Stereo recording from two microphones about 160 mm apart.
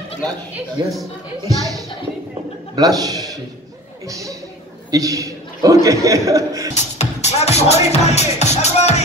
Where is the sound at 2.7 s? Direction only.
25° right (ahead or behind).